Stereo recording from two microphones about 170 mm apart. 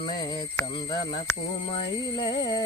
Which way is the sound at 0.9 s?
25° left (ahead or behind).